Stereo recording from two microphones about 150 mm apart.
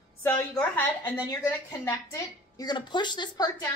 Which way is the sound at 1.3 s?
20° left (ahead or behind).